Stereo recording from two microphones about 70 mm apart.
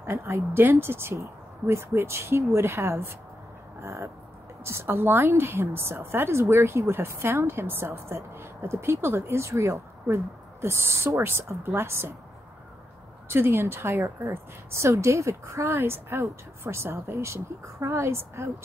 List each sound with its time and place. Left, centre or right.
0.0 s a woman's voice: right
13.3 s a woman's voice: right